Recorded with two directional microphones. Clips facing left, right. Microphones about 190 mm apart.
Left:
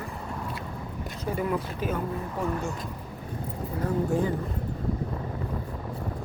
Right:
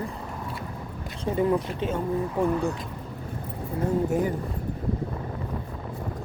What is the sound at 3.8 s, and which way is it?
Speech, 20° right (ahead or behind).